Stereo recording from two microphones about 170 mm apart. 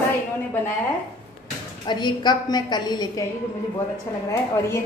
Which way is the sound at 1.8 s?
25° left (ahead or behind).